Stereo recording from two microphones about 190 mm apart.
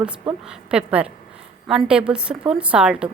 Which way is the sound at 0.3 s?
5° right (ahead or behind).